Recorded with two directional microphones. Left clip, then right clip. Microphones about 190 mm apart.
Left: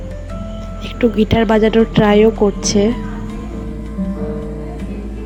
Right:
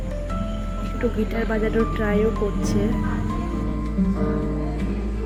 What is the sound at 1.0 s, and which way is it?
A woman's voice, 40° left (ahead or behind).